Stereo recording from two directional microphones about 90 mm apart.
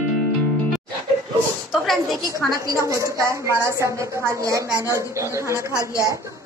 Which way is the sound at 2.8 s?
35° right (ahead or behind).